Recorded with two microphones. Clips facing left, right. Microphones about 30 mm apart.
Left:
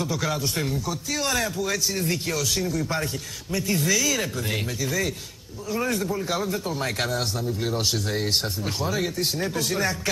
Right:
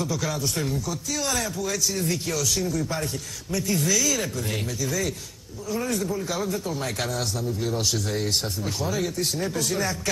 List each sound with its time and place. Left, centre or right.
0.0 s a man's voice: left